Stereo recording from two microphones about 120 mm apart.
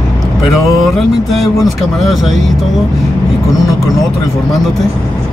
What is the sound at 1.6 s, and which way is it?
Speech, centre (ahead or behind).